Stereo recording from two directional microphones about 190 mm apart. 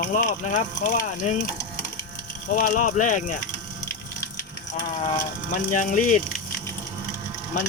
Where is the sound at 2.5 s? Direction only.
45° left (ahead or behind).